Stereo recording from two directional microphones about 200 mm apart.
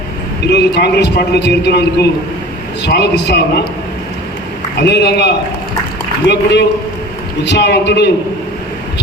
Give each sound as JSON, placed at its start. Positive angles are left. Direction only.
{"t": 0.4, "sound": "a man's voice", "side_deg": 60}
{"t": 4.8, "sound": "a man's voice", "side_deg": 55}